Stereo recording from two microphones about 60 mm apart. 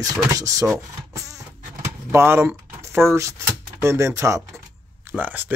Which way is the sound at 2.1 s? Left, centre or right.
Right.